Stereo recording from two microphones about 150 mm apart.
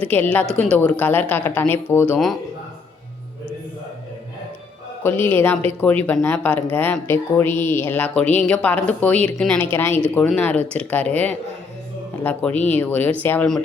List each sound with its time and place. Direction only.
0.1 s speech: 10° left (ahead or behind)
5.0 s speech: 15° left (ahead or behind)
9.6 s speech: 15° left (ahead or behind)